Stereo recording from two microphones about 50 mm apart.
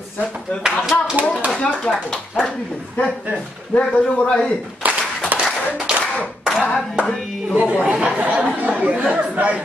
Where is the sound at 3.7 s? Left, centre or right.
Left.